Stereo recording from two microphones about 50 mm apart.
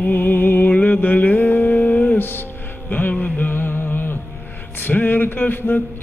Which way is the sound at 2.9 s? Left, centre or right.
Left.